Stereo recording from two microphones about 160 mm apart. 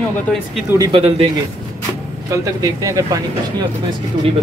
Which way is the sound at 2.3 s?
20° right (ahead or behind).